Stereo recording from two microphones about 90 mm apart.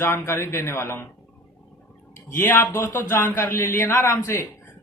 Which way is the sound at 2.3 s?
25° left (ahead or behind).